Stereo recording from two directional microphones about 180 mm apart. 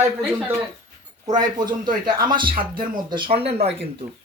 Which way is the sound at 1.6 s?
25° right (ahead or behind).